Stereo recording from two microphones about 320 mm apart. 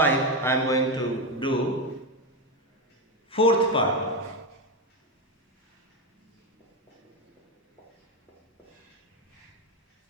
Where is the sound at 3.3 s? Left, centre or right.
Centre.